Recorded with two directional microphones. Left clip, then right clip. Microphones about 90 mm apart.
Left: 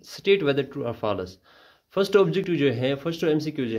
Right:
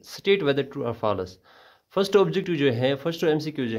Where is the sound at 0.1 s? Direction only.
50° right (ahead or behind).